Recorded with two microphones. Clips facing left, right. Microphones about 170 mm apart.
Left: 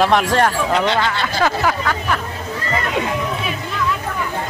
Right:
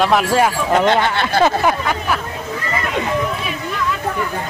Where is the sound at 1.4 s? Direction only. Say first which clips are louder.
Right 3 dB; 20° right (ahead or behind).